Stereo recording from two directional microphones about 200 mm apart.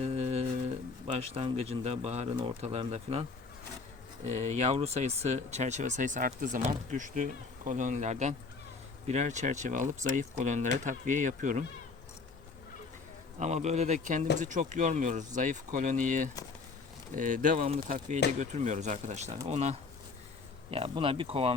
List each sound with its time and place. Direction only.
0.0 s humming: 35° right (ahead or behind)
1.0 s speech: 30° right (ahead or behind)
4.3 s speech: 35° right (ahead or behind)
13.4 s speech: 35° right (ahead or behind)